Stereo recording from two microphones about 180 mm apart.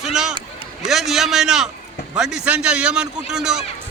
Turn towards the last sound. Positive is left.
turn(degrees=-5)  # may be behind; listen again after turning